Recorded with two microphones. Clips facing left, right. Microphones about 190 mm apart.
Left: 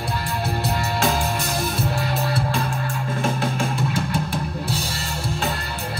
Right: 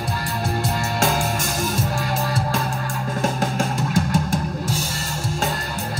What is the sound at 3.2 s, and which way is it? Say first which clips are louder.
Drum kit: right 1 dB; 40° right (ahead or behind).